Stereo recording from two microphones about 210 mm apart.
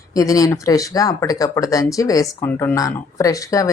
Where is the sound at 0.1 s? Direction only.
15° left (ahead or behind).